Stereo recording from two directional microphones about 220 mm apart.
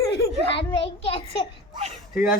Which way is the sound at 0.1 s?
25° left (ahead or behind).